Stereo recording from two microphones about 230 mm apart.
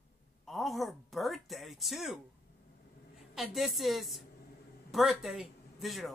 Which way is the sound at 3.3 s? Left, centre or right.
Centre.